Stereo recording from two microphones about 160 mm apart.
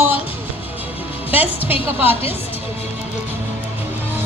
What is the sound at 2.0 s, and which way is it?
Speech, 35° left (ahead or behind).